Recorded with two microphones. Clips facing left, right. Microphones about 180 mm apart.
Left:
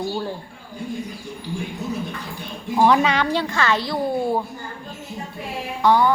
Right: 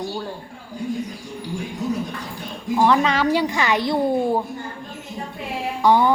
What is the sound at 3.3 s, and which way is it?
A woman's voice, 15° right (ahead or behind).